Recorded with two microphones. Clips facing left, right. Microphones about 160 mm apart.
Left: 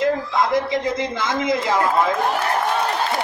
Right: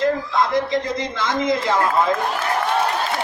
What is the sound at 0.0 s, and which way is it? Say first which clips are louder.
A man's voice: even; 25° left (ahead or behind).